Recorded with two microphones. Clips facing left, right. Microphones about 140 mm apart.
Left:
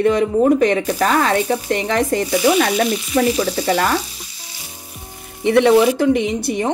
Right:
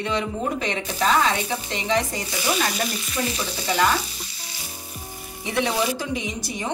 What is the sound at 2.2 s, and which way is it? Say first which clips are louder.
Frying: left 10 dB; 70° left (ahead or behind).